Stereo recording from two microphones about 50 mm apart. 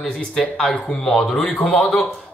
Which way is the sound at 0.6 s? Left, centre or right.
Centre.